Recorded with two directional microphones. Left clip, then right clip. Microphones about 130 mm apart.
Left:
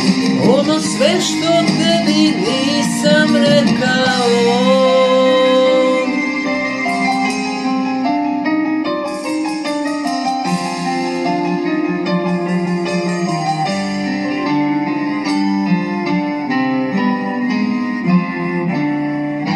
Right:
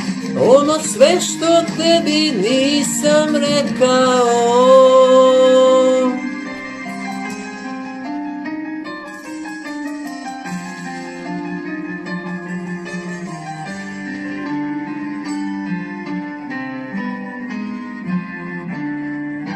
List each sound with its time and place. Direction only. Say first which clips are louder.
0.0 s music: left 2 dB; 50° left (ahead or behind)
1.8 s music: even; 10° right (ahead or behind)
2.5 s music: even; 40° left (ahead or behind)